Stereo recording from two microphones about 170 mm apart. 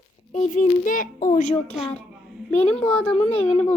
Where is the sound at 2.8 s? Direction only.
35° left (ahead or behind).